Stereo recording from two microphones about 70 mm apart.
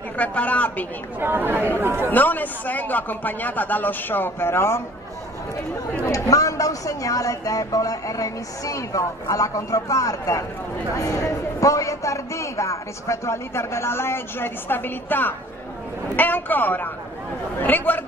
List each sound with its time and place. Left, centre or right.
0.2 s speech: left
1.2 s speech: right
2.0 s speech: left
6.1 s a man's voice: left